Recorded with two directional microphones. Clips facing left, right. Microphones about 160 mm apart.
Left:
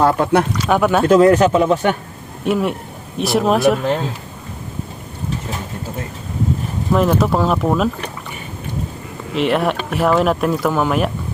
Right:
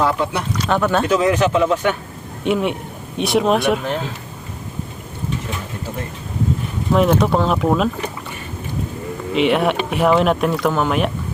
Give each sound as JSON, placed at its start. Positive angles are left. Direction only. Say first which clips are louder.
{"t": 0.0, "sound": "speech", "louder": "left 5 dB", "side_deg": 50}
{"t": 0.6, "sound": "speech", "louder": "left 2 dB", "side_deg": 10}
{"t": 1.0, "sound": "speech", "louder": "left 6 dB", "side_deg": 50}
{"t": 2.4, "sound": "speech", "louder": "left 1 dB", "side_deg": 0}
{"t": 6.9, "sound": "speech", "louder": "even", "side_deg": 0}
{"t": 9.3, "sound": "speech", "louder": "right 1 dB", "side_deg": 0}